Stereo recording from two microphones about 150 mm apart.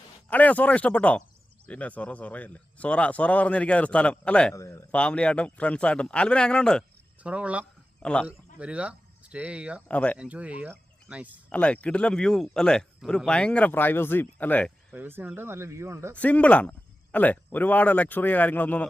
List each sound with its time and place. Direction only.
0.3 s speech: 10° left (ahead or behind)
4.5 s speech: 20° left (ahead or behind)
4.9 s speech: 5° left (ahead or behind)
7.2 s speech: 10° right (ahead or behind)
8.0 s speech: 5° left (ahead or behind)
8.3 s speech: 10° right (ahead or behind)
9.9 s speech: 10° left (ahead or behind)
10.2 s speech: 10° right (ahead or behind)
11.4 s speech: 10° left (ahead or behind)
14.9 s speech: 15° right (ahead or behind)
16.1 s speech: 10° left (ahead or behind)